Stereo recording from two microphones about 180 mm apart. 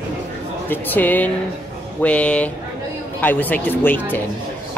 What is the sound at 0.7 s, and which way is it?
Speech, 10° left (ahead or behind).